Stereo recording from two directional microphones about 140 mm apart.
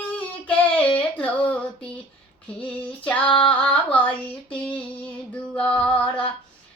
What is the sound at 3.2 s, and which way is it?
Female singing, 35° left (ahead or behind).